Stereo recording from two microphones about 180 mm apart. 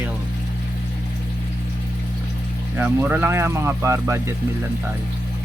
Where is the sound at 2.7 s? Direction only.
10° right (ahead or behind).